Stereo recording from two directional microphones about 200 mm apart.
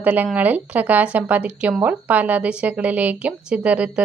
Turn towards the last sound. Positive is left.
turn(degrees=-5)  # may be behind; listen again after turning